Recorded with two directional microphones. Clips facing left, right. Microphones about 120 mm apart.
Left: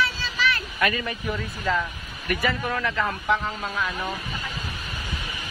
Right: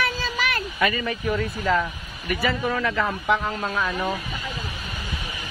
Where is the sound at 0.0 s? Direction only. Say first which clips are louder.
Even; 50° right (ahead or behind).